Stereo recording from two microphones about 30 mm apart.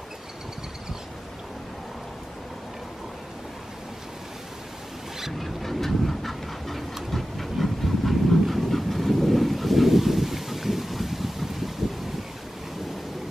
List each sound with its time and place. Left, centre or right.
5.4 s vehicle: centre
7.1 s train: centre